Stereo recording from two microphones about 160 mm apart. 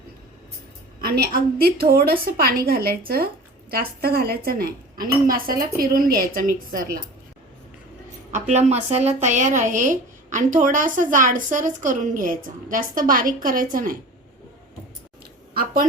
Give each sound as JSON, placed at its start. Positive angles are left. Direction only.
{"t": 1.0, "sound": "speech", "side_deg": -75}
{"t": 8.3, "sound": "speech", "side_deg": -45}
{"t": 15.5, "sound": "a sound", "side_deg": -65}